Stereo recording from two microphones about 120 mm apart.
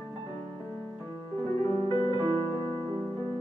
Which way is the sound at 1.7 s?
45° left (ahead or behind).